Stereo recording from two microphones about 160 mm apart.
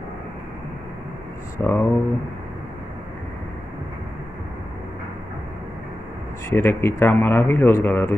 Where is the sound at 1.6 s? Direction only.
15° left (ahead or behind).